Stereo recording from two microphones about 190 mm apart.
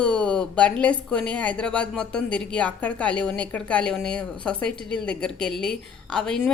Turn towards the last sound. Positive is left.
turn(degrees=5)  # may be behind; listen again after turning